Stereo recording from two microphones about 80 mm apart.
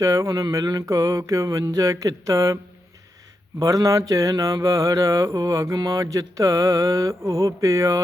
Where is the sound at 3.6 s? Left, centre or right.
Right.